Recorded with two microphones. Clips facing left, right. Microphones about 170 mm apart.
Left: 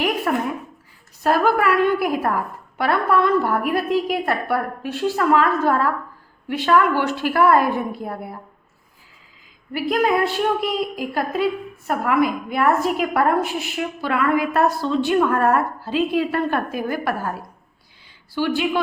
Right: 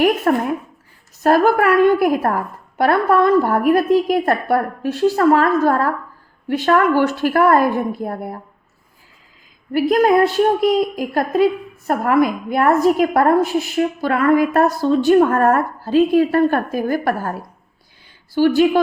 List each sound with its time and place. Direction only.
0.3 s a woman's voice: 45° right (ahead or behind)
9.7 s a woman's voice: 45° right (ahead or behind)
18.3 s speech: 45° right (ahead or behind)